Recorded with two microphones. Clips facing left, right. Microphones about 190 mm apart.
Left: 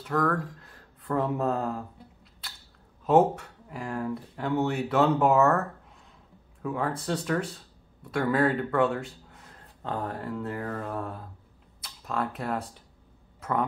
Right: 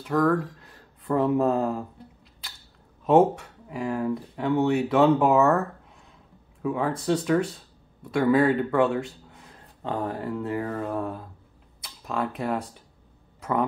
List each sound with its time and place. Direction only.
0.1 s speech: 10° right (ahead or behind)
3.1 s speech: 10° right (ahead or behind)
6.6 s speech: 10° right (ahead or behind)
11.8 s camera: 10° right (ahead or behind)
13.4 s a sound: 10° right (ahead or behind)